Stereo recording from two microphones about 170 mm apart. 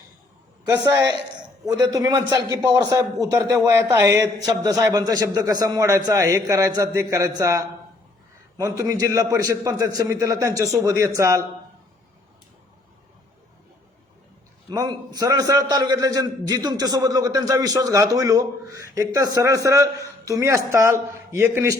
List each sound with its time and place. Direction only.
0.8 s a man's voice: 25° right (ahead or behind)
14.7 s a man's voice: 25° right (ahead or behind)